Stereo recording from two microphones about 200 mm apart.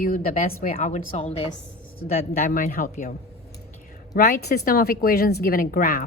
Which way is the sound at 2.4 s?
45° left (ahead or behind).